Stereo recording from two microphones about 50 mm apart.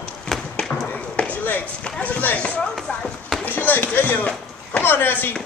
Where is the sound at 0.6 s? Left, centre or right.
Centre.